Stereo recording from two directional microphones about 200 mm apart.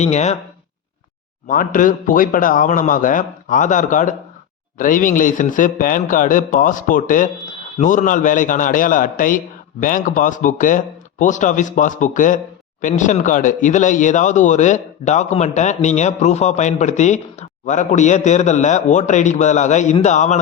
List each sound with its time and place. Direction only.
0.0 s speech: 35° left (ahead or behind)
1.5 s speech: 40° left (ahead or behind)